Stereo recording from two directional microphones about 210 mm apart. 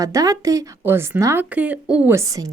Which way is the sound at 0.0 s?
15° right (ahead or behind).